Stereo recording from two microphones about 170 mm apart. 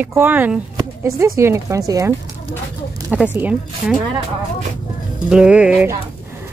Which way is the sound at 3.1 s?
10° right (ahead or behind).